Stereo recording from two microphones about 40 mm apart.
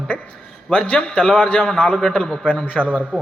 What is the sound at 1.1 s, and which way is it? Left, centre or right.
A man's voice, centre.